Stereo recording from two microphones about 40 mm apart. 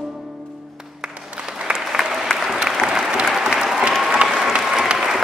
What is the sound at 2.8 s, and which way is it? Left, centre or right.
Applause, centre.